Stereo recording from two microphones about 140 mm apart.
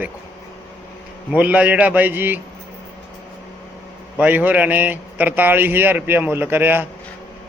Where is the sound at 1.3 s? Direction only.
10° right (ahead or behind).